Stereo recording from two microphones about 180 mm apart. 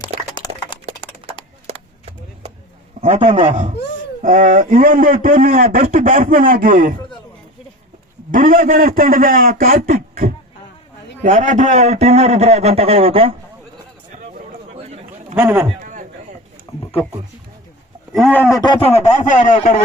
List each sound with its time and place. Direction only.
0.3 s a sound: 25° left (ahead or behind)
1.7 s chop: 35° right (ahead or behind)
3.0 s a man's voice: 35° right (ahead or behind)
4.2 s a man's voice: 45° right (ahead or behind)
8.3 s a man's voice: 50° right (ahead or behind); by 13.3 s 30° right (ahead or behind)
14.8 s a sound: 40° right (ahead or behind)
15.4 s a man's voice: 5° right (ahead or behind)
15.8 s a sound: 45° right (ahead or behind)
18.1 s speech: 5° left (ahead or behind)
18.6 s speech: 30° left (ahead or behind); by 19.5 s 45° left (ahead or behind)